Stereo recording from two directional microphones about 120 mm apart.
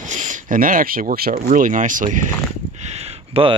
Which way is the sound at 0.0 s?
90° right.